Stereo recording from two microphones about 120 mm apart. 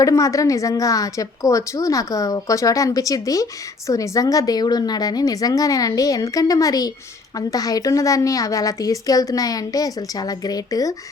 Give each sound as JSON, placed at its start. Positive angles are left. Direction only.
{"t": 0.0, "sound": "a woman's voice", "side_deg": 30}